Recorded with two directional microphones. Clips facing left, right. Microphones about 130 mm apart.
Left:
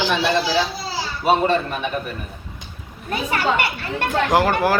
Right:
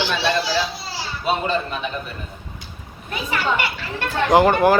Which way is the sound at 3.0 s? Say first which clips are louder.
Left 2 dB; 50° left (ahead or behind).